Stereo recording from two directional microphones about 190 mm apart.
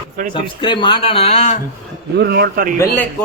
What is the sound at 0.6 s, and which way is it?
Speech, 25° left (ahead or behind).